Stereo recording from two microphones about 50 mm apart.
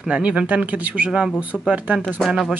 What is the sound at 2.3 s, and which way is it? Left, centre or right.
Speech, centre.